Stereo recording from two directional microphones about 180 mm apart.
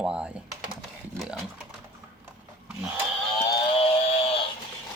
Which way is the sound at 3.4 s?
25° left (ahead or behind).